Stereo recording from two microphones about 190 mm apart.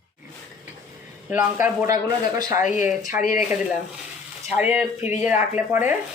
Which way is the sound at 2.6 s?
40° left (ahead or behind).